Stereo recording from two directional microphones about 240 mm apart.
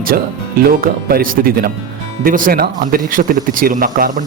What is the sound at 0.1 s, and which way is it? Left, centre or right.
Speech, right.